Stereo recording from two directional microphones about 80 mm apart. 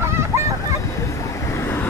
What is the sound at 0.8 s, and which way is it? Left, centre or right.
Waves, left.